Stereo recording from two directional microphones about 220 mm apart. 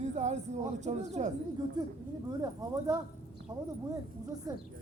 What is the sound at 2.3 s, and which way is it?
Speech, 15° right (ahead or behind).